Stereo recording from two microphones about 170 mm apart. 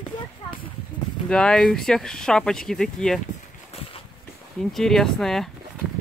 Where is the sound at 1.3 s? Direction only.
5° left (ahead or behind).